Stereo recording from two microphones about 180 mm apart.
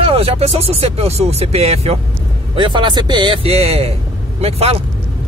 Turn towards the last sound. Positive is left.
turn(degrees=-35)  # may be behind; listen again after turning